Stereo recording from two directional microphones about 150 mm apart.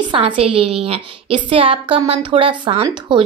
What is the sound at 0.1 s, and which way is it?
Speech, 35° right (ahead or behind).